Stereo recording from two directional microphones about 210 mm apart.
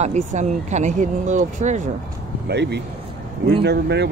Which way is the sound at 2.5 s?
55° right (ahead or behind).